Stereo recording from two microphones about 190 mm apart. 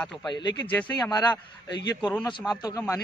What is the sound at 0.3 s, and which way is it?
Speech, 20° left (ahead or behind).